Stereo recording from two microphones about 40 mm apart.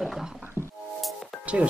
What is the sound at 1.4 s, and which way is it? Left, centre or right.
Music, right.